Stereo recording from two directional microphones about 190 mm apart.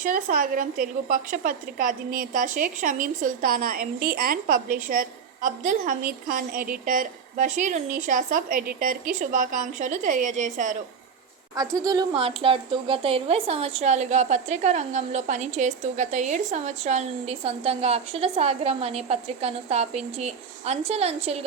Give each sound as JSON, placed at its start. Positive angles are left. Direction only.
{"t": 0.0, "sound": "a woman's voice", "side_deg": -45}
{"t": 11.5, "sound": "a woman's voice", "side_deg": -20}